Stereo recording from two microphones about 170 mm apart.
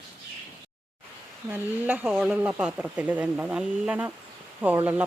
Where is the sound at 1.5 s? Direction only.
10° right (ahead or behind).